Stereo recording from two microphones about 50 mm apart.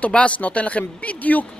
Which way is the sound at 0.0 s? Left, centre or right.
Left.